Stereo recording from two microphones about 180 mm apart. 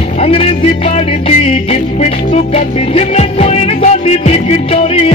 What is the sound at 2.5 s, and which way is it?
Music, 35° left (ahead or behind).